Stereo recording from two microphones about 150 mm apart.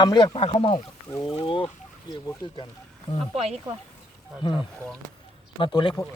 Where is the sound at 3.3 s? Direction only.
45° right (ahead or behind).